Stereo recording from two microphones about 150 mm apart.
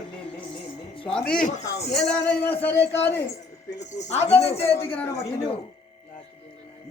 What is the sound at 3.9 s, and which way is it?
A woman's voice, 50° left (ahead or behind).